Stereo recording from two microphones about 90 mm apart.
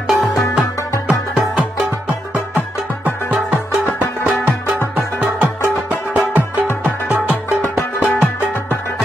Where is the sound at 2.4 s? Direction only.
20° right (ahead or behind).